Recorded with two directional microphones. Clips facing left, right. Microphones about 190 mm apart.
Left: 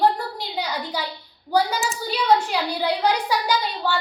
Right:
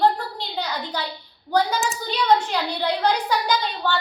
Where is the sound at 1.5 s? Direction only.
5° left (ahead or behind).